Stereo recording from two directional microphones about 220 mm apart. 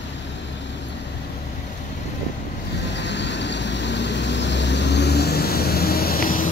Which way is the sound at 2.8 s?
50° left (ahead or behind).